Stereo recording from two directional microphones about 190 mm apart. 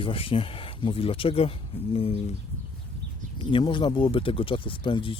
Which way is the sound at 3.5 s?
25° left (ahead or behind).